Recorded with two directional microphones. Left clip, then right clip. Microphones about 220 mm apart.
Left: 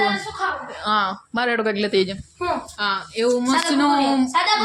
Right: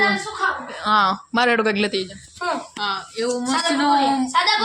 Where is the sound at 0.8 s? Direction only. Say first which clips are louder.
Right 4 dB; 5° right (ahead or behind).